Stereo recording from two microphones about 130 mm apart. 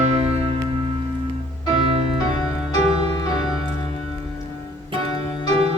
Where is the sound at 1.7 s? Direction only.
50° right (ahead or behind).